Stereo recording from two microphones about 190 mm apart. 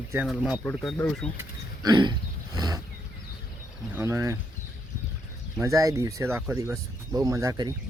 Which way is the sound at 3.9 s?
15° right (ahead or behind).